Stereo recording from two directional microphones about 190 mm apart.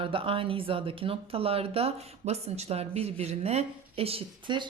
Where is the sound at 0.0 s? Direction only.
30° right (ahead or behind).